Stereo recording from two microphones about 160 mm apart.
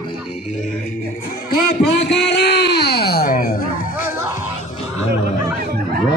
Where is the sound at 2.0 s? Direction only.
90° left; by 3.6 s 60° left (ahead or behind).